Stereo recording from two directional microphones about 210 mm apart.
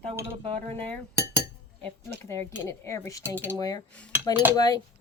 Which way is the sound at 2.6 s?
15° left (ahead or behind).